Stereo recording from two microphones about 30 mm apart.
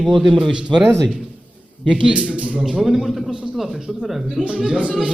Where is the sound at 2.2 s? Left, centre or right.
Right.